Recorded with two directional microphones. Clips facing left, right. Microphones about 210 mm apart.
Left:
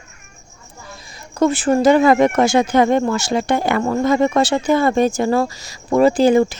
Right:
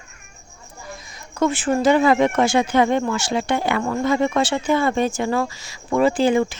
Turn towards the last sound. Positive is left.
turn(degrees=40)  # may be behind; listen again after turning